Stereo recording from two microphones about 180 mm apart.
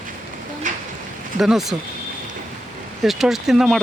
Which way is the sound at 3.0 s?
Centre (ahead or behind).